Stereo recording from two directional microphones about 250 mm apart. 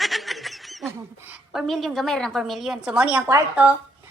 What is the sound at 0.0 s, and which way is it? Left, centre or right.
A child's voice, centre.